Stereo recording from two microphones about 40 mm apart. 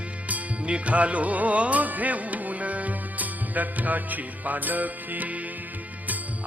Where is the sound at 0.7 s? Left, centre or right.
Right.